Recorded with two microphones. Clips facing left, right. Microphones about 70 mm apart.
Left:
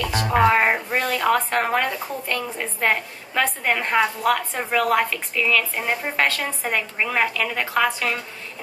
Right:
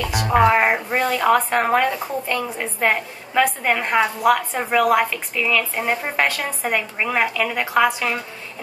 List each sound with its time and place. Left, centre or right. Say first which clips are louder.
0.0 s speech: right 2 dB; centre